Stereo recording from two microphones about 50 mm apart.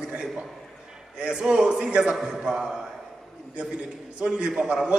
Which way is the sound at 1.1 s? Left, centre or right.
Centre.